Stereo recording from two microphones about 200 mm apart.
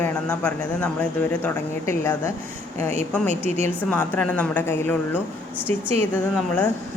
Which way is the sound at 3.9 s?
5° left (ahead or behind).